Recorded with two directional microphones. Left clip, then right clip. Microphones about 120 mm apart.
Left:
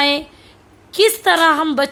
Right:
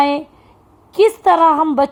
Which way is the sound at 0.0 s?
10° right (ahead or behind).